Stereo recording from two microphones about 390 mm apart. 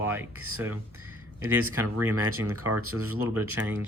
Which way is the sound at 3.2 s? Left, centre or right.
Centre.